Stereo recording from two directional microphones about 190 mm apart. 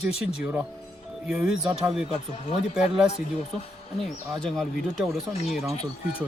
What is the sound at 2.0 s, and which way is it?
Speech, 30° left (ahead or behind).